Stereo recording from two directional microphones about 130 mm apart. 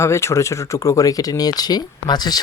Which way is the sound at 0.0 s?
20° left (ahead or behind).